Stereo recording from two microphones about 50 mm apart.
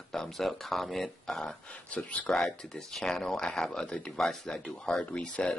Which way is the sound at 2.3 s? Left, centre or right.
Centre.